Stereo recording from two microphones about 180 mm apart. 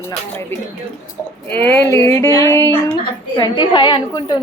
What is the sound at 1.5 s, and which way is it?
A woman's voice, 10° left (ahead or behind).